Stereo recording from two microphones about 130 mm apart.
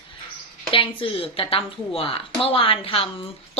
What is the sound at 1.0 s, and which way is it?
A woman's voice, 45° left (ahead or behind).